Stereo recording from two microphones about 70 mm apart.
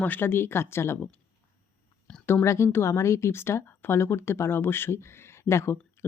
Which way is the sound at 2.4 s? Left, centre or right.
Left.